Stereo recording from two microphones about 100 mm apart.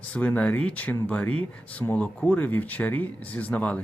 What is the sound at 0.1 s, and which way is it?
Speech, 15° left (ahead or behind).